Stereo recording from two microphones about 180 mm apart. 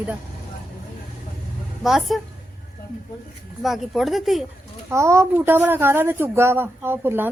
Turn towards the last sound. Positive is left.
turn(degrees=-10)  # may be behind; listen again after turning